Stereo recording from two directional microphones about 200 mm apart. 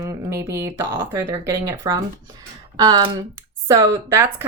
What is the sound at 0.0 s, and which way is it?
Speech, 15° right (ahead or behind).